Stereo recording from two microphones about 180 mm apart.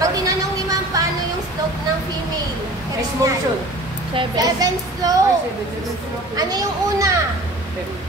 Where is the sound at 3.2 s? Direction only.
15° right (ahead or behind).